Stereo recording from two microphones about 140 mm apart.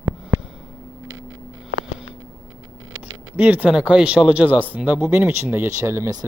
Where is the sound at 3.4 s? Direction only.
10° right (ahead or behind).